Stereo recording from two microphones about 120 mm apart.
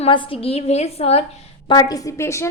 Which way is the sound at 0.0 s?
45° left (ahead or behind).